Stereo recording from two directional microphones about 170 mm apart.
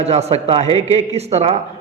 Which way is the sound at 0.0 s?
40° right (ahead or behind).